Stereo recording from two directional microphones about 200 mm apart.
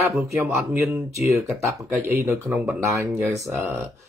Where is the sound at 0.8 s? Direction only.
Centre (ahead or behind).